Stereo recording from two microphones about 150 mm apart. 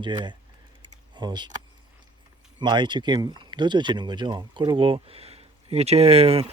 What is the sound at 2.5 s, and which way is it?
Speech, 30° right (ahead or behind).